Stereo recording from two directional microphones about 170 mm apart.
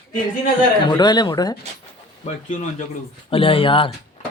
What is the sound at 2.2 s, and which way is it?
Speech, 40° left (ahead or behind).